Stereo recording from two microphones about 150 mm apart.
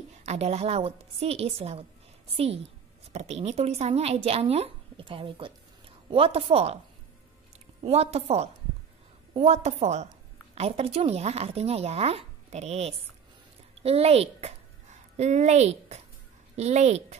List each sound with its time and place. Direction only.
0.2 s a woman's voice: 45° right (ahead or behind)
7.8 s a woman's voice: 45° right (ahead or behind)